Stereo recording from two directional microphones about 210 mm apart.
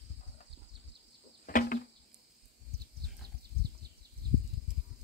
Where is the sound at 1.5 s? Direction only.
40° left (ahead or behind).